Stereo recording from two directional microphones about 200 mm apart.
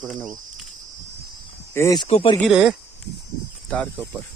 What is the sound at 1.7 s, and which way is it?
Speech, 15° left (ahead or behind).